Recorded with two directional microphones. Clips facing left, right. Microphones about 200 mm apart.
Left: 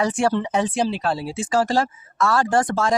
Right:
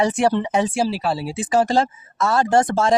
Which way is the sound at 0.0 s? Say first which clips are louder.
Right 2 dB; 20° right (ahead or behind).